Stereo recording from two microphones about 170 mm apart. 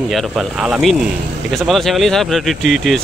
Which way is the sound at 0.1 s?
Centre (ahead or behind).